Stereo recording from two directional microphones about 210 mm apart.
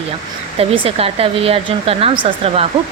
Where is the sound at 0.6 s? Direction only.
25° right (ahead or behind).